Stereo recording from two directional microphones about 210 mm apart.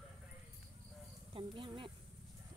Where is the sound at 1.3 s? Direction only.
25° right (ahead or behind).